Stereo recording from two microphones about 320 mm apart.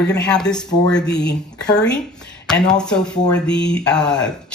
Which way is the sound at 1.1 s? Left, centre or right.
Left.